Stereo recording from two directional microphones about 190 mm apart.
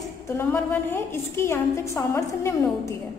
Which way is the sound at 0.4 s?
10° left (ahead or behind).